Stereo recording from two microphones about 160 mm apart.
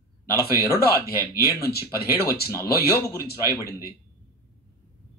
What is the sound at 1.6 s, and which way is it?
Speech, 75° left (ahead or behind).